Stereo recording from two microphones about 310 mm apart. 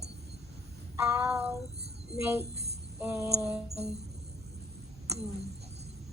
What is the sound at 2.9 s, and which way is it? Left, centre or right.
Music, centre.